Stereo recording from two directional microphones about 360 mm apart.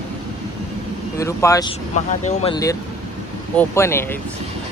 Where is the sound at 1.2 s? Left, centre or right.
Centre.